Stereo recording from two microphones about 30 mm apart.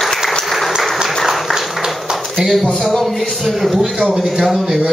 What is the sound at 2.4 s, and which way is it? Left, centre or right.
Speech, right.